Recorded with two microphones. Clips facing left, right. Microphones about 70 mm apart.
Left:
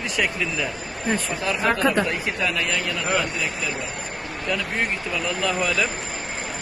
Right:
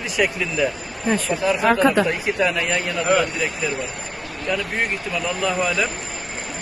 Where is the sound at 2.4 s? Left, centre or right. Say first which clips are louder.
Right 4 dB; right.